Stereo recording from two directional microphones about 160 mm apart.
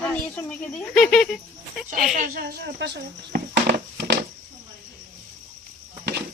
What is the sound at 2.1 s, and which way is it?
Speech, 70° right (ahead or behind).